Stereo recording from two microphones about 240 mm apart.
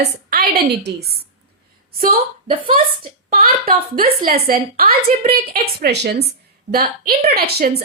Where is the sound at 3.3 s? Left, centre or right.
Right.